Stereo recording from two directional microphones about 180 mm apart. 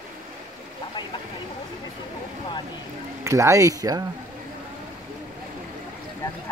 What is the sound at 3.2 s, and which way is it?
Speech, 15° right (ahead or behind).